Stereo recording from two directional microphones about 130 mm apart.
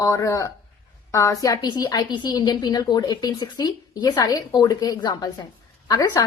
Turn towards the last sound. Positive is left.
turn(degrees=30)  # may be behind; listen again after turning